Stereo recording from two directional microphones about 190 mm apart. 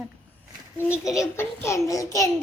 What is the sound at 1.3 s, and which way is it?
Speech, 15° left (ahead or behind).